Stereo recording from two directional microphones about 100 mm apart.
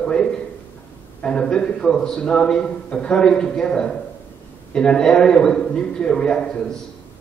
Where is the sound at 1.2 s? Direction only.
10° left (ahead or behind).